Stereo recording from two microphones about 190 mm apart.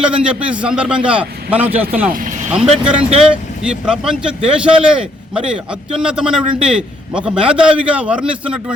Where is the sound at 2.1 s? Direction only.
45° right (ahead or behind).